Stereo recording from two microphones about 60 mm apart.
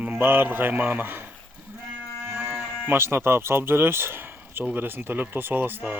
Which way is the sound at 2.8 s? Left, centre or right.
Right.